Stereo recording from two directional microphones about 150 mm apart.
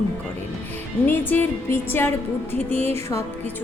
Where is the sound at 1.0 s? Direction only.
15° left (ahead or behind).